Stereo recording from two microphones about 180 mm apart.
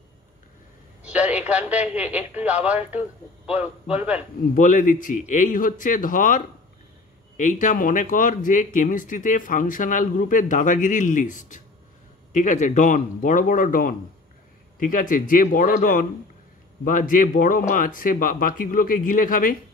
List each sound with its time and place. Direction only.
1.0 s a man's voice: 5° right (ahead or behind)
4.6 s speech: 45° left (ahead or behind)